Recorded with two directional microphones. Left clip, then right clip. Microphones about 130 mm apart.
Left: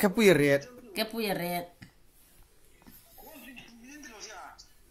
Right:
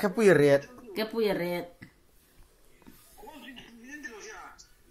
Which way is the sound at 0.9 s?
90° left.